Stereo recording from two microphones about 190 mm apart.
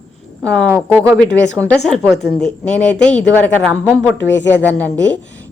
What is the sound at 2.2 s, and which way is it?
Speech, 60° left (ahead or behind).